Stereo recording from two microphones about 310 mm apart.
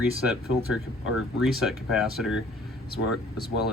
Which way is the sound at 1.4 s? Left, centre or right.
Centre.